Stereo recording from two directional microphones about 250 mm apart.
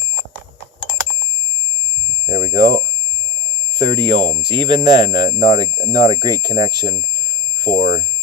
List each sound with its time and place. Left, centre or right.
2.2 s speech: centre
3.8 s speech: right
7.7 s speech: left